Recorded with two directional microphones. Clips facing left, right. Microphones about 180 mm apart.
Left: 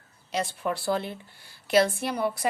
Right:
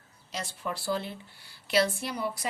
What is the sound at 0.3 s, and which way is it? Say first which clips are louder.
A woman's voice: left 7 dB; 60° left (ahead or behind).